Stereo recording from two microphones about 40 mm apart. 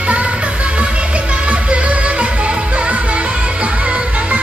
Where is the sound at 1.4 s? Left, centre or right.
Right.